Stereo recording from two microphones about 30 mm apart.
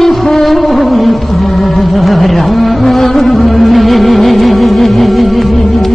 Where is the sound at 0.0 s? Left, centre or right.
Centre.